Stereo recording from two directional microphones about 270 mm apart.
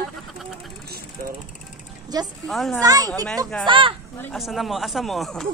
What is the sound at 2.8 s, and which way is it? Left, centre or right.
Speech, centre.